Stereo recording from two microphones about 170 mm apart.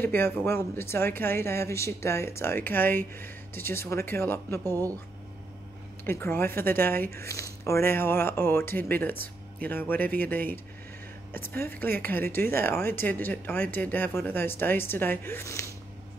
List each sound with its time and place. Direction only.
0.0 s speech: 10° left (ahead or behind)
4.6 s speech: 20° right (ahead or behind)
6.0 s speech: 15° left (ahead or behind)